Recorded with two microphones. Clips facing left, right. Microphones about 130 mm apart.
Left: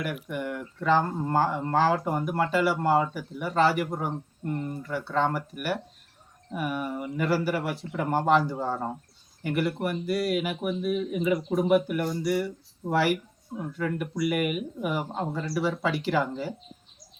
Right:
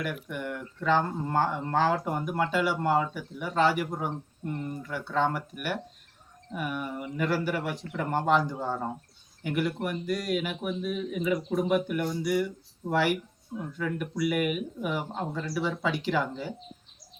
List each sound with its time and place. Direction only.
0.0 s speech: 5° left (ahead or behind)